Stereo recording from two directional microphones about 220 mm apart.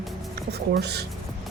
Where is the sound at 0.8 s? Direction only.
50° right (ahead or behind).